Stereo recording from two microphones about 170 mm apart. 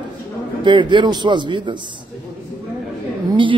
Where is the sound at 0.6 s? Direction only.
25° right (ahead or behind).